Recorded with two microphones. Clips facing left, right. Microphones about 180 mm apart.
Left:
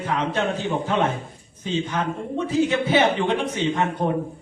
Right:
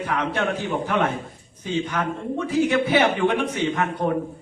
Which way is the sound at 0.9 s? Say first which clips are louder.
Even; 20° left (ahead or behind).